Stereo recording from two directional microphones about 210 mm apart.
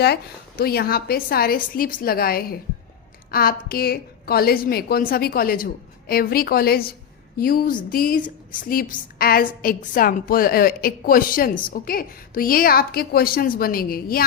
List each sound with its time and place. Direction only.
0.0 s a woman's voice: 50° left (ahead or behind)